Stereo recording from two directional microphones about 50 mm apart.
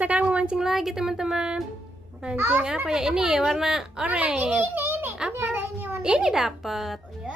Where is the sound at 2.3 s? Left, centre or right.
Right.